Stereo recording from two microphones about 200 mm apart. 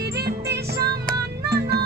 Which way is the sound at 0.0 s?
55° right (ahead or behind).